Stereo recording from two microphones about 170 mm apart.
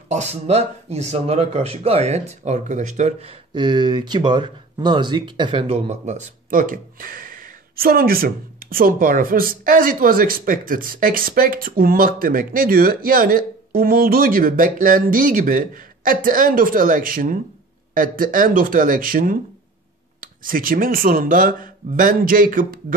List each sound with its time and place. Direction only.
0.1 s speech: 40° right (ahead or behind)
5.9 s speech: 45° right (ahead or behind)